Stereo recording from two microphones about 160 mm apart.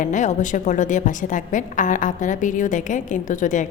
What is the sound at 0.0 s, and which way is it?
A woman's voice, 50° left (ahead or behind).